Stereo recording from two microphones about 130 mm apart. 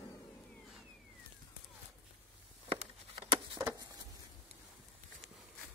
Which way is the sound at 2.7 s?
45° right (ahead or behind).